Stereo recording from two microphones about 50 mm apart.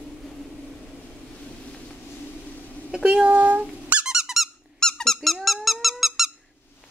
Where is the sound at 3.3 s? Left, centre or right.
Right.